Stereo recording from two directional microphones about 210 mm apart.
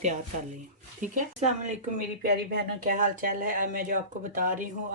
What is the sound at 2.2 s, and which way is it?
Speech, 45° right (ahead or behind).